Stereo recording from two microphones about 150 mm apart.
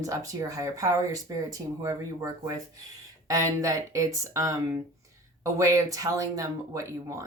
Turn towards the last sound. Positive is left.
turn(degrees=-20)  # may be behind; listen again after turning